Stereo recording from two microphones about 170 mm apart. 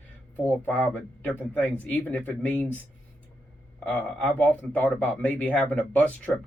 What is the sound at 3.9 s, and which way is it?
Speech, 5° left (ahead or behind).